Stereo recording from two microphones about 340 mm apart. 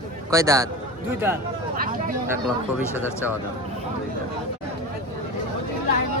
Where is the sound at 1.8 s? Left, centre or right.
Right.